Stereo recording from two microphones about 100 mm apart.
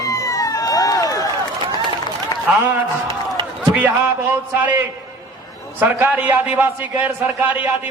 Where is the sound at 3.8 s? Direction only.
15° right (ahead or behind).